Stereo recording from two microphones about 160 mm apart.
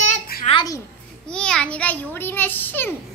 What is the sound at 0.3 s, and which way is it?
Babbling, 70° left (ahead or behind).